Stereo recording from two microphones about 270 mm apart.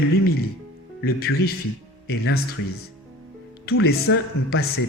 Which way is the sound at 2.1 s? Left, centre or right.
Left.